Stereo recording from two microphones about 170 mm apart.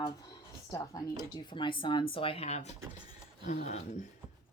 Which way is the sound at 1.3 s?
30° left (ahead or behind).